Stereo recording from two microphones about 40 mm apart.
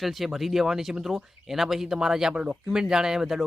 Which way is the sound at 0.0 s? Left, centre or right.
Centre.